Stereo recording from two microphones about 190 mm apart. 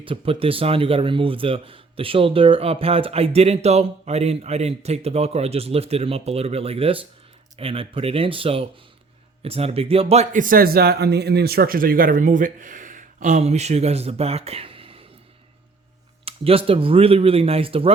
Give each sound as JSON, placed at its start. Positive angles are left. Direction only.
{"t": 0.0, "sound": "speech", "side_deg": -30}
{"t": 16.2, "sound": "speech", "side_deg": -30}